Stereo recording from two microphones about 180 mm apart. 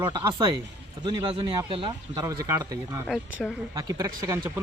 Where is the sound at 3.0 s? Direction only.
Centre (ahead or behind).